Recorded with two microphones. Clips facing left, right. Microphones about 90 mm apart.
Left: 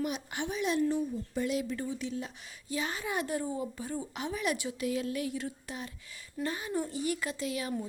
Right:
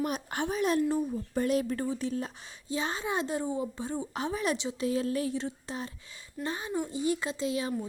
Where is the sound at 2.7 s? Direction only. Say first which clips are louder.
Right 2 dB; 30° right (ahead or behind).